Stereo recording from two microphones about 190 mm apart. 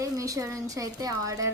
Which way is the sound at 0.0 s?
15° right (ahead or behind).